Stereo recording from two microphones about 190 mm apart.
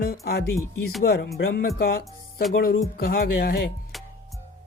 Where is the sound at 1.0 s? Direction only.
55° left (ahead or behind).